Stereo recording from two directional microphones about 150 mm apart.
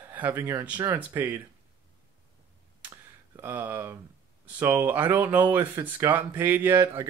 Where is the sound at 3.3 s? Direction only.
15° right (ahead or behind).